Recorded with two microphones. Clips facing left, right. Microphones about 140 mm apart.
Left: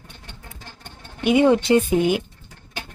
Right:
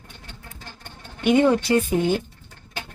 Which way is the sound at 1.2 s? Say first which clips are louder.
Left 1 dB; 10° left (ahead or behind).